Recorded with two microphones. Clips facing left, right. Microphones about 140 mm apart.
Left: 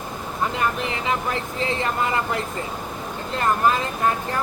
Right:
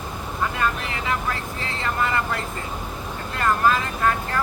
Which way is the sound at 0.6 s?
20° left (ahead or behind).